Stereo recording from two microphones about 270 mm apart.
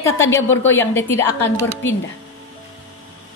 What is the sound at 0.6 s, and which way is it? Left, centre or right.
A woman's voice, centre.